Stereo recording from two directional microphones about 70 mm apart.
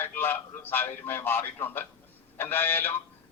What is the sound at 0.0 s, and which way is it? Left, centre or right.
Speech, left.